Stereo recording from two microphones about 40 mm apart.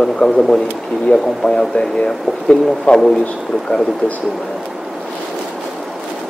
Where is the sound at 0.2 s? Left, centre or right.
Centre.